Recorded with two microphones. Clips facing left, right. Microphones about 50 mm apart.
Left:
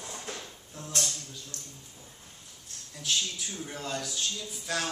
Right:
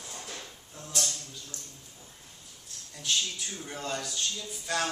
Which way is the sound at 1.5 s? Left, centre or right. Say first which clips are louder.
Even; left.